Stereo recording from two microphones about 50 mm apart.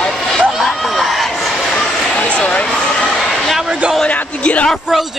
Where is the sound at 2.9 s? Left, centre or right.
Centre.